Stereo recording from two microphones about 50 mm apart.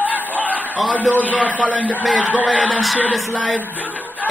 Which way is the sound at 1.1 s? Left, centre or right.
Left.